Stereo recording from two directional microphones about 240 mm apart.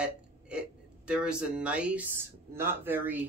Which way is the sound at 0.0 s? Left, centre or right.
Centre.